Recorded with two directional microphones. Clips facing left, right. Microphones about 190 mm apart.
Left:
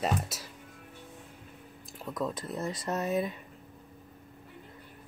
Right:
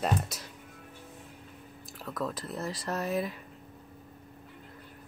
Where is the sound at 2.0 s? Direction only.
20° left (ahead or behind).